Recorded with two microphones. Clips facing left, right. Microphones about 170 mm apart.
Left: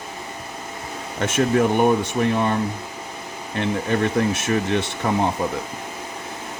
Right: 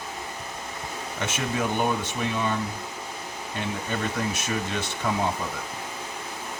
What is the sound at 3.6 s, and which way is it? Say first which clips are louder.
Speech: left 9 dB; 65° left (ahead or behind).